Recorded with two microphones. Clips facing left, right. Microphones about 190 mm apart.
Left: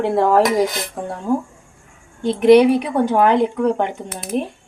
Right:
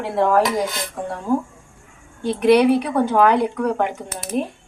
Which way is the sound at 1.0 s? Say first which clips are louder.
Even; 35° left (ahead or behind).